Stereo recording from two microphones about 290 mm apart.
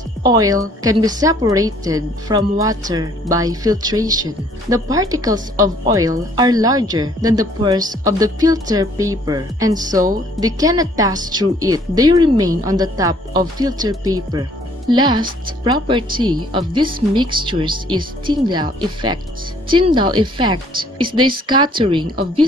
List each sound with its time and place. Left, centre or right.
0.2 s a woman's voice: centre